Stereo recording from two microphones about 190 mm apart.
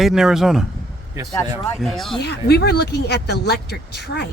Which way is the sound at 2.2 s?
60° left (ahead or behind).